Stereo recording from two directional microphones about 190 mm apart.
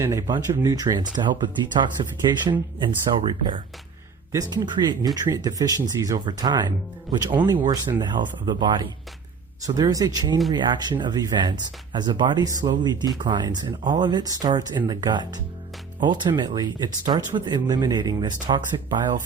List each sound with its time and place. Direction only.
0.0 s speech: 15° right (ahead or behind)